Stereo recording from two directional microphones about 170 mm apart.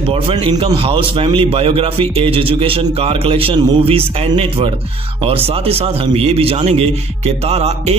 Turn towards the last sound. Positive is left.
turn(degrees=-40)  # may be behind; listen again after turning